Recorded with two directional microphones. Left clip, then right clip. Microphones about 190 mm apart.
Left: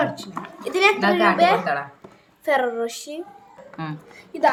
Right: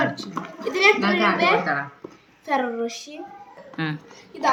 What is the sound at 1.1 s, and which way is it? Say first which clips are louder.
Speech: left 3 dB; 30° left (ahead or behind).